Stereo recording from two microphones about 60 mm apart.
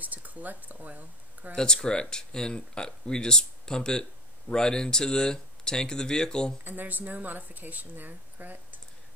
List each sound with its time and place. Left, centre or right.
0.0 s speech: right
1.5 s speech: centre
6.6 s speech: right